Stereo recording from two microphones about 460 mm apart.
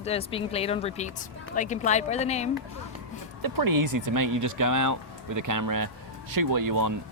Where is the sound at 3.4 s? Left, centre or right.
Right.